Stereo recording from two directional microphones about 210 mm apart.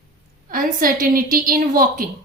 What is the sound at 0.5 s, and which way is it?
A woman's voice, 40° right (ahead or behind).